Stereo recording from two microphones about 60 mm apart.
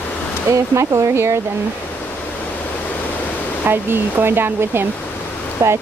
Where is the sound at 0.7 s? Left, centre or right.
Right.